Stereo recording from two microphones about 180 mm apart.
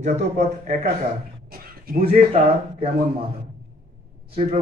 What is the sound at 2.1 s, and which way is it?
Speech, 35° right (ahead or behind).